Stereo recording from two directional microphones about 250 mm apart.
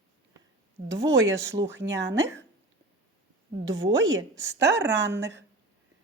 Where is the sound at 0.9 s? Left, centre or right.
Centre.